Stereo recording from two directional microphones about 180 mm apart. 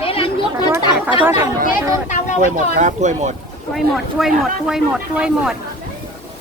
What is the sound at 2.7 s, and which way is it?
Speech, 40° right (ahead or behind).